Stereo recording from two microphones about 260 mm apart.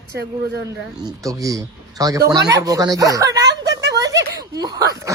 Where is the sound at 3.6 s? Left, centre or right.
Right.